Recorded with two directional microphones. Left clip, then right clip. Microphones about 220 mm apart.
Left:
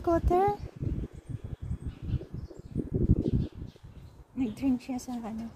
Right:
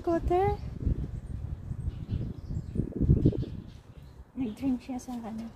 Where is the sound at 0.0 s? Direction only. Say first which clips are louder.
Left 1 dB; 10° left (ahead or behind).